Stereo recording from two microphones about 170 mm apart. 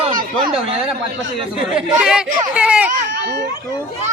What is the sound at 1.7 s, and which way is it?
Speech, 5° right (ahead or behind).